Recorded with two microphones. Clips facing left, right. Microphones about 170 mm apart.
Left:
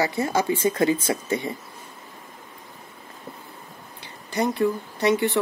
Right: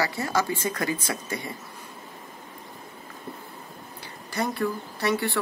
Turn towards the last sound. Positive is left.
turn(degrees=20)  # may be behind; listen again after turning